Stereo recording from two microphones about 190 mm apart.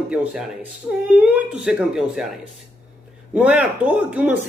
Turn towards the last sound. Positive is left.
turn(degrees=-5)  # may be behind; listen again after turning